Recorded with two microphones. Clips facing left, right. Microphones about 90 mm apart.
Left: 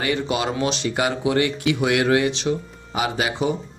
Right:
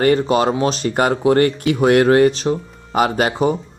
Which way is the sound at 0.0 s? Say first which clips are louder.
Right 8 dB; 45° right (ahead or behind).